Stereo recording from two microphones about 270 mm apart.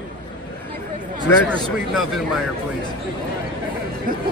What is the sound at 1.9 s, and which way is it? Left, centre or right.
Speech, centre.